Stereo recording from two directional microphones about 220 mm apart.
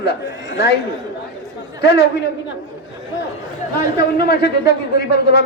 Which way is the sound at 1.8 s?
50° left (ahead or behind).